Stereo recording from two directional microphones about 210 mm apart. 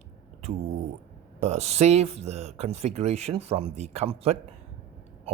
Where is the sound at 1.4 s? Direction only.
30° right (ahead or behind).